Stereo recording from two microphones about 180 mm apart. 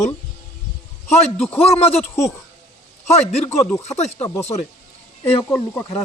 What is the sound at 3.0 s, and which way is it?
Speech, 40° left (ahead or behind).